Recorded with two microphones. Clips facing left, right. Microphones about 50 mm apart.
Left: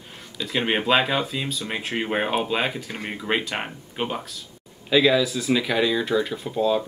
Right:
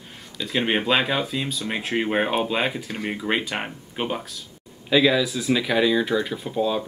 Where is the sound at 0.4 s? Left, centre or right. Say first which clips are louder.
Right 1 dB; centre.